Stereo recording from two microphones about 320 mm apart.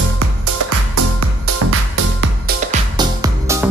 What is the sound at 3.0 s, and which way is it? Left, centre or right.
Music, centre.